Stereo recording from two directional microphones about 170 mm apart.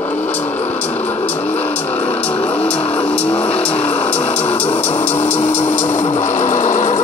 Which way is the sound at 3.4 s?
35° left (ahead or behind).